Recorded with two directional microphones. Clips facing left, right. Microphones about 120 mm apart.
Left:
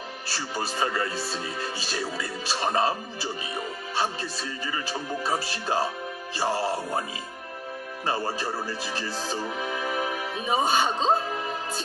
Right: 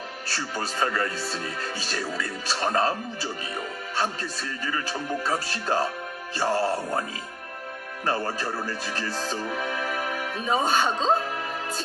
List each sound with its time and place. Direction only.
0.6 s speech: 20° left (ahead or behind)
4.0 s speech: 15° left (ahead or behind)
8.1 s speech: 15° left (ahead or behind)